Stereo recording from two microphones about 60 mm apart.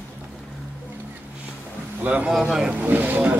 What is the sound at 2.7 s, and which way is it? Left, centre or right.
Boat, right.